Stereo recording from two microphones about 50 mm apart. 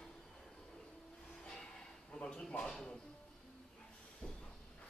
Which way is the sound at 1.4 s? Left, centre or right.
Centre.